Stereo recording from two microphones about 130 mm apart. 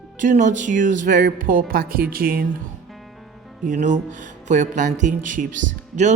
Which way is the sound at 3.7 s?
75° right (ahead or behind).